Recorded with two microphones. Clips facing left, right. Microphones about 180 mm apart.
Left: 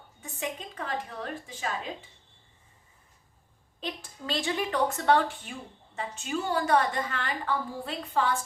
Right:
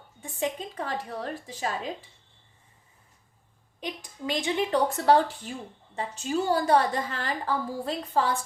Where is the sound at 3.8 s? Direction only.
15° right (ahead or behind).